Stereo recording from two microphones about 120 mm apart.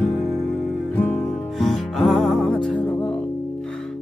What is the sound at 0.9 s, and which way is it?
Music, 15° left (ahead or behind).